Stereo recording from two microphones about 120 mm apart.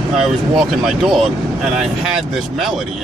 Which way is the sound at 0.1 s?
5° right (ahead or behind).